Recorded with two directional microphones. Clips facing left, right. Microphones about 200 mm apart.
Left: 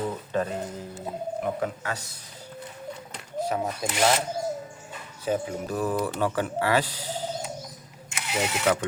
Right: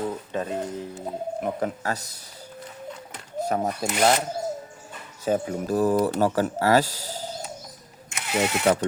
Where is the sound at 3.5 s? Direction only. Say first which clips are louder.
Right 5 dB; 45° right (ahead or behind).